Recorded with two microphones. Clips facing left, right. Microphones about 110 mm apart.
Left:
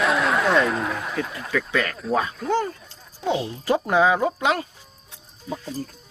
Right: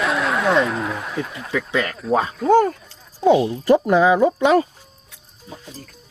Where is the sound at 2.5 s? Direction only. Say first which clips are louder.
Right 11 dB; 50° right (ahead or behind).